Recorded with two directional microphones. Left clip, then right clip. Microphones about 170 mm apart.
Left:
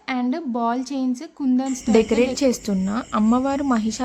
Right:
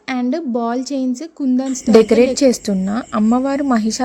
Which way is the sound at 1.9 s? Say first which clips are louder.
Right 8 dB; 30° right (ahead or behind).